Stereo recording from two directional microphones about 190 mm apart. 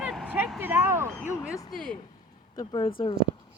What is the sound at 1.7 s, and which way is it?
Speech, 5° left (ahead or behind).